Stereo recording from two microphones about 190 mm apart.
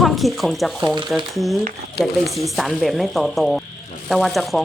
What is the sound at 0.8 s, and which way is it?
Speech, 20° right (ahead or behind).